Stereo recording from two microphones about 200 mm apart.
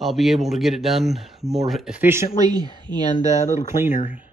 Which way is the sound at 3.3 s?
35° left (ahead or behind).